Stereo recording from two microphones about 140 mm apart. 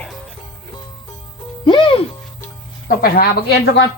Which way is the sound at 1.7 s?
35° left (ahead or behind).